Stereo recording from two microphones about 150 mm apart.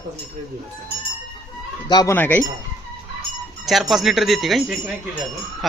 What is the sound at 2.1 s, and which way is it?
Speech, 10° left (ahead or behind).